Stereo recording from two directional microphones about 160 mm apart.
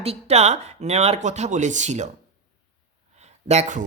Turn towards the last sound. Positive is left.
turn(degrees=-45)  # may be behind; listen again after turning